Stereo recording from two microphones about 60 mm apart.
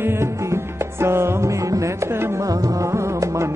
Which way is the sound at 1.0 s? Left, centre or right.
Right.